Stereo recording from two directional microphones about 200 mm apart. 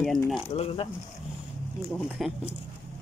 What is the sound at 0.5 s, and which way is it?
Speech, 30° left (ahead or behind).